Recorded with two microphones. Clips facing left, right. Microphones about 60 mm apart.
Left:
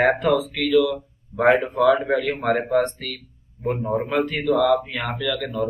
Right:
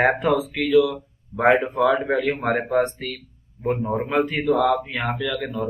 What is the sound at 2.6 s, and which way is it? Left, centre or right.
A man's voice, centre.